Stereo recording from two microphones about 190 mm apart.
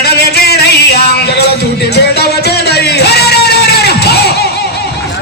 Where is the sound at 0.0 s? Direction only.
60° left (ahead or behind).